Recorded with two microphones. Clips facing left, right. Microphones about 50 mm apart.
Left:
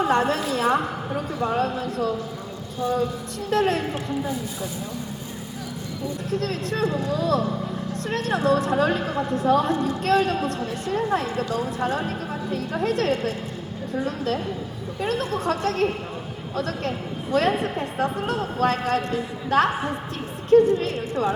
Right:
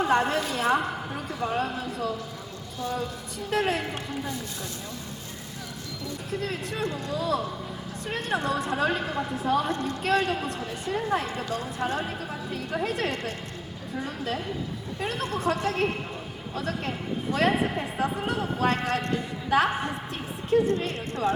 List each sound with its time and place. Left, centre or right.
0.0 s a woman's voice: centre
3.5 s a woman's voice: centre
6.4 s speech: centre
6.8 s speech: centre
7.1 s a woman's voice: centre
9.7 s speech: centre
10.0 s a woman's voice: centre